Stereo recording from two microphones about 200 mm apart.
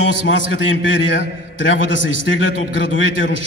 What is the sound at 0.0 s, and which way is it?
A man's voice, 70° left (ahead or behind).